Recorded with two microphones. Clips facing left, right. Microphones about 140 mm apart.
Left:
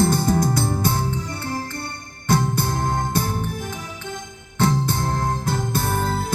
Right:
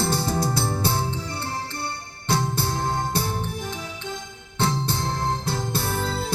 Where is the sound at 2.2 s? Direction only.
50° left (ahead or behind).